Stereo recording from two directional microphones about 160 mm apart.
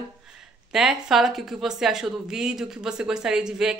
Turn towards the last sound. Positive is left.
turn(degrees=-5)  # may be behind; listen again after turning